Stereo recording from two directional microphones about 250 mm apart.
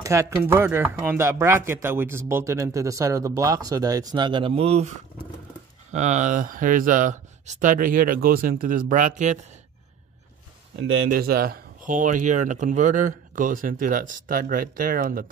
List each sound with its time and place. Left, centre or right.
0.0 s speech: centre; by 9.4 s right
10.8 s speech: right